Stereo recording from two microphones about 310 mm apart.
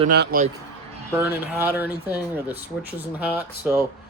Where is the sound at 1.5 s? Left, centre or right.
Centre.